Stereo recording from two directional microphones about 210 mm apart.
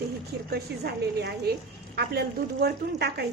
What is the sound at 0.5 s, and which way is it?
A woman's voice, 50° right (ahead or behind).